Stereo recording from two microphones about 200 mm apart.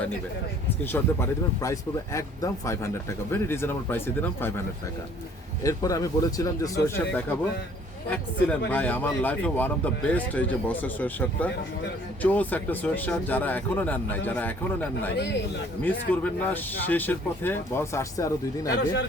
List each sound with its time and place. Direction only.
0.9 s speech: 15° left (ahead or behind)
5.6 s speech: 15° left (ahead or behind)
15.1 s a man's voice: 60° left (ahead or behind)
15.8 s speech: 10° left (ahead or behind)